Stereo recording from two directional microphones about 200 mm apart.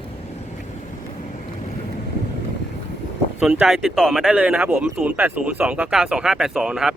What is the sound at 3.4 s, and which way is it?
Speech, 5° right (ahead or behind).